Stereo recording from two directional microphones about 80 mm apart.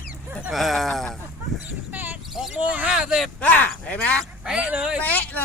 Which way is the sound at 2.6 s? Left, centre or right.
Centre.